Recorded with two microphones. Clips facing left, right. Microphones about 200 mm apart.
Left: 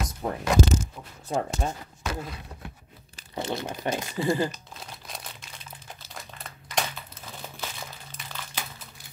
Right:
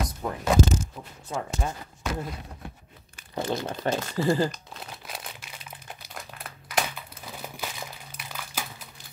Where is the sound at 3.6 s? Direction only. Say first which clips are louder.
Right 2 dB; 10° left (ahead or behind).